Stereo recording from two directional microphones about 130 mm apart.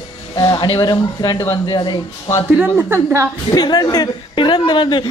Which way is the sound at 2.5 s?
15° right (ahead or behind).